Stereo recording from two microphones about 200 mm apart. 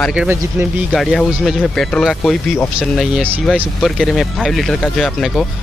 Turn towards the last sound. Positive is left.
turn(degrees=0)  # may be behind; listen again after turning